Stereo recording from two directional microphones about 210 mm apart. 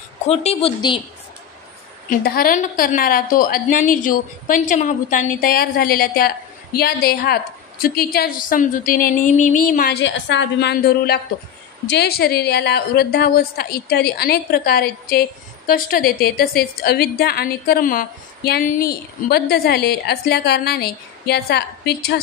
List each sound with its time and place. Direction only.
0.3 s a woman's voice: 30° left (ahead or behind)
2.0 s a woman's voice: 45° left (ahead or behind)